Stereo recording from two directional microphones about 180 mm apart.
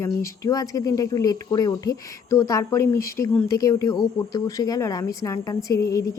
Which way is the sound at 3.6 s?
20° left (ahead or behind).